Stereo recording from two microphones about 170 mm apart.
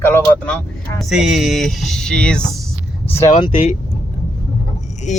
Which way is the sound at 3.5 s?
45° left (ahead or behind).